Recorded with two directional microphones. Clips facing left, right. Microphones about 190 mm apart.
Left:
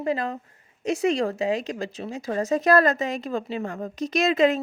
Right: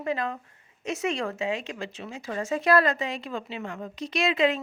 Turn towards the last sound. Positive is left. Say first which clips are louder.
# left 4 dB
turn(degrees=45)  # may be behind; listen again after turning